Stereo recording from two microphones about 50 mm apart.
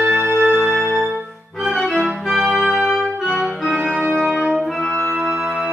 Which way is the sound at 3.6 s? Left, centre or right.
Centre.